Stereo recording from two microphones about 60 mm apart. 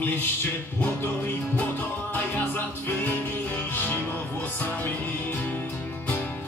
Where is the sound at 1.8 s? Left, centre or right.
Left.